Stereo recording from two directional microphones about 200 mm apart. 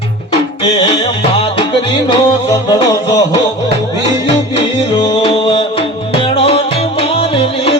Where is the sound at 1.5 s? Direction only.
25° left (ahead or behind).